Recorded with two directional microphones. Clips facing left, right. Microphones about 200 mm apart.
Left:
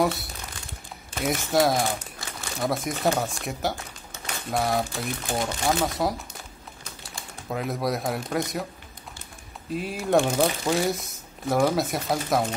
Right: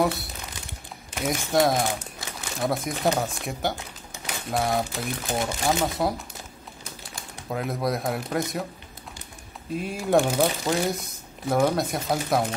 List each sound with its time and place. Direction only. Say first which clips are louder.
0.0 s speech: even; centre (ahead or behind)
1.9 s speech: even; 15° right (ahead or behind)
2.5 s speech: even; centre (ahead or behind)
3.7 s a sound: even; 15° right (ahead or behind)
4.5 s speech: even; centre (ahead or behind)
9.8 s speech: even; centre (ahead or behind)